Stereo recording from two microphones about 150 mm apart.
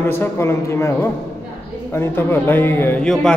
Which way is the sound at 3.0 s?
5° left (ahead or behind).